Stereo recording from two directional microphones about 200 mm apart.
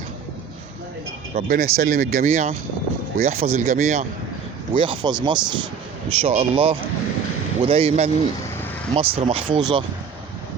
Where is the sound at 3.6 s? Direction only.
35° right (ahead or behind).